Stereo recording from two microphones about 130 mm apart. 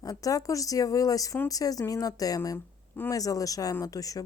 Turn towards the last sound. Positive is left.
turn(degrees=25)  # may be behind; listen again after turning